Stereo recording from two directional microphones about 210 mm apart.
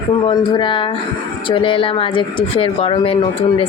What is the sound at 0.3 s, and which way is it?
Speech, 25° left (ahead or behind).